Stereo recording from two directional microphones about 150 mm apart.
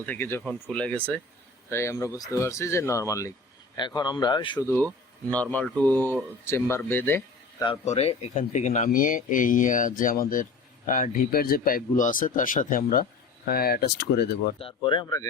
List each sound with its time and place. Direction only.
0.0 s speech: 15° left (ahead or behind); by 4.6 s 30° left (ahead or behind)
5.3 s speech: 10° left (ahead or behind)
7.9 s speech: 45° left (ahead or behind); by 13.1 s 70° left (ahead or behind)
13.5 s speech: 90° left
14.6 s speech: 35° left (ahead or behind)